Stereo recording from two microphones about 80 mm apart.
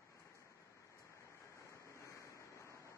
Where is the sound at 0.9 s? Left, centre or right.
Left.